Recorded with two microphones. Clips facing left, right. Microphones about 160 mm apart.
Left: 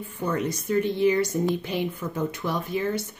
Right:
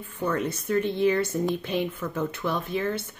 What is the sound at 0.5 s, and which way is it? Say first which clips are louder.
Speech: left 1 dB; 15° left (ahead or behind).